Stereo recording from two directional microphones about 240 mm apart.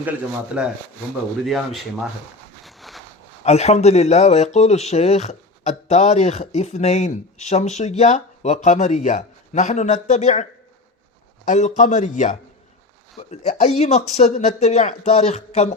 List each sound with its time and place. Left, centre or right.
0.5 s speech: centre
2.6 s a sound: centre
3.4 s speech: left
11.4 s a man's voice: left